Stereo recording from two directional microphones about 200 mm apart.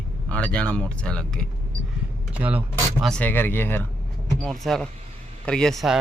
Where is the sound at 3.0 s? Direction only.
5° left (ahead or behind).